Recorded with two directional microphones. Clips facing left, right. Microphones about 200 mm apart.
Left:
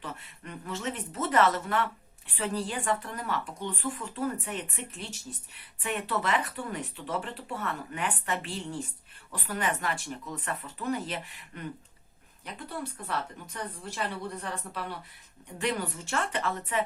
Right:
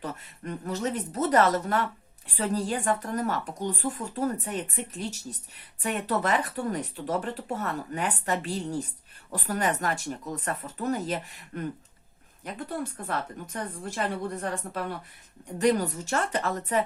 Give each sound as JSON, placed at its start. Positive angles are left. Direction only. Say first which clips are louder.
{"t": 0.0, "sound": "a woman's voice", "louder": "right 5 dB", "side_deg": -40}